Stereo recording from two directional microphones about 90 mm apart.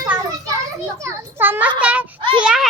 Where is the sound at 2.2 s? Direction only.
60° right (ahead or behind).